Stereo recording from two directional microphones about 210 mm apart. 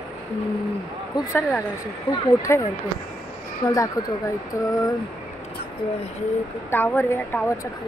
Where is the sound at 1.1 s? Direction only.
10° left (ahead or behind).